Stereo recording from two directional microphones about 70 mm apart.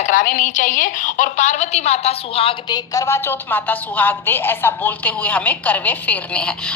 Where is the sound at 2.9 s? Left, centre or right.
Left.